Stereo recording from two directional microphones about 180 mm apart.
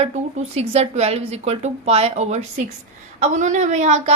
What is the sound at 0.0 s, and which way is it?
A woman's voice, 40° right (ahead or behind).